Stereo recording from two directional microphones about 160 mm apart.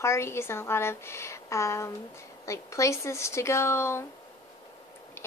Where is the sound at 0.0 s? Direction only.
15° left (ahead or behind).